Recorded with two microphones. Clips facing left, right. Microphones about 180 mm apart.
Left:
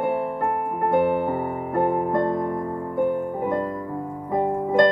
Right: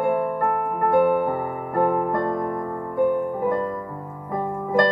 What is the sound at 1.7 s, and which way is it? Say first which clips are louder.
Music: even; 25° left (ahead or behind).